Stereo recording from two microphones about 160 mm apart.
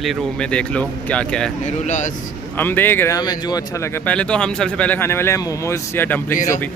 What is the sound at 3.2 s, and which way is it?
Speech, 25° left (ahead or behind).